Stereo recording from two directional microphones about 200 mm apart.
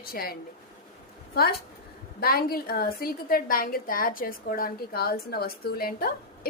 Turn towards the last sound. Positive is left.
turn(degrees=50)  # may be behind; listen again after turning